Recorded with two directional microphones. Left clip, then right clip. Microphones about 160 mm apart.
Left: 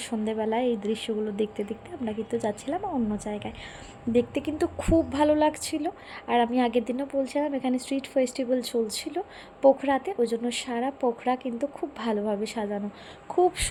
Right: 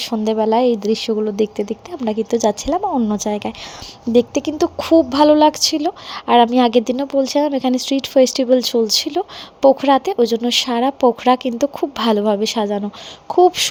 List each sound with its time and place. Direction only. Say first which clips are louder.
0.0 s a woman's voice: right 11 dB; 40° right (ahead or behind)
4.1 s a woman's voice: right 10 dB; 35° right (ahead or behind)